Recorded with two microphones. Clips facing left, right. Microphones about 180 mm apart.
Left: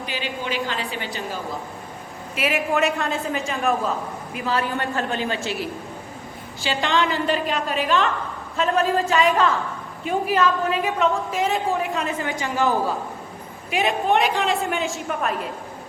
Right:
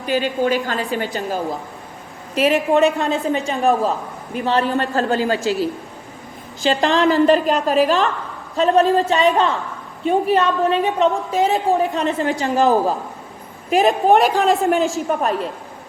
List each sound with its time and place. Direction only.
0.0 s a woman's voice: 45° right (ahead or behind)
6.6 s a woman's voice: 35° right (ahead or behind)